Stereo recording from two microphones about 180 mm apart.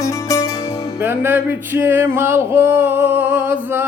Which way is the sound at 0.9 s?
10° right (ahead or behind).